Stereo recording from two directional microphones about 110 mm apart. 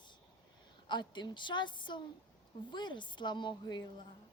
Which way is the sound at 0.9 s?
45° left (ahead or behind).